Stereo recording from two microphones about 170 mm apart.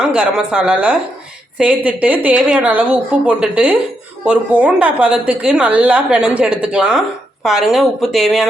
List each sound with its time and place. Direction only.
0.0 s speech: 5° right (ahead or behind)